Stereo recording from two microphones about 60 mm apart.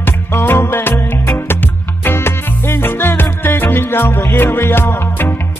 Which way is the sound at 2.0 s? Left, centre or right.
Left.